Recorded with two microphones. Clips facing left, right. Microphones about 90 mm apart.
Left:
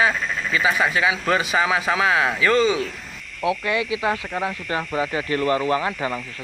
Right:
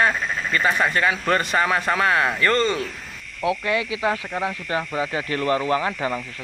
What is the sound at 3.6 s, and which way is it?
Speech, 30° right (ahead or behind).